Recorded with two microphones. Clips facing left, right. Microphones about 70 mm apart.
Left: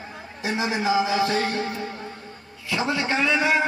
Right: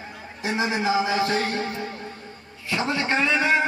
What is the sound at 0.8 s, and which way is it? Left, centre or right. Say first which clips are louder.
Speech: left 2 dB; right.